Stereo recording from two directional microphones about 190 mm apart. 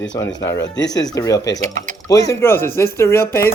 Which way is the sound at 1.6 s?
40° right (ahead or behind).